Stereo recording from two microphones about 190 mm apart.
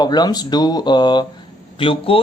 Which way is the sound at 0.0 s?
20° left (ahead or behind).